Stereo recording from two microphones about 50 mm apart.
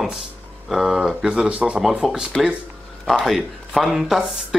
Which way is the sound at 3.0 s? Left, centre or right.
Centre.